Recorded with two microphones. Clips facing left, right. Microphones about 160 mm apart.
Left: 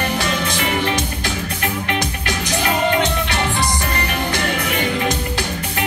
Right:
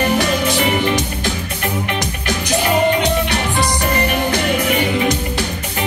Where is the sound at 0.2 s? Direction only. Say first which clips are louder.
Right 5 dB; 15° right (ahead or behind).